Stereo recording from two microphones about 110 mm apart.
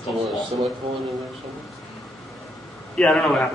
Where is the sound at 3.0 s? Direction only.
5° left (ahead or behind).